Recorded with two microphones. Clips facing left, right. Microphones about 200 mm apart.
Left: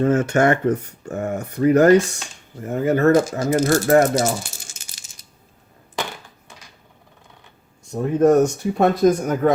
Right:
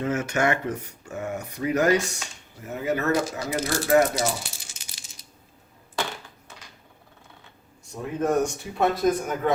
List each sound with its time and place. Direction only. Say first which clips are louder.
0.0 s speech: left 8 dB; 50° left (ahead or behind)
7.9 s speech: left 9 dB; 45° left (ahead or behind)